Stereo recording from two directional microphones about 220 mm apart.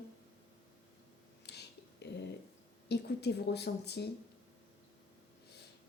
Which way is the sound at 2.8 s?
50° left (ahead or behind).